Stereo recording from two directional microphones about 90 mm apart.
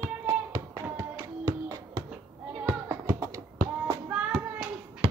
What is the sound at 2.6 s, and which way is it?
Music, 35° right (ahead or behind).